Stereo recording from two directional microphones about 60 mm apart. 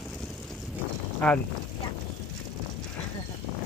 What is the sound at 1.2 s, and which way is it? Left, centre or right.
Speech, centre.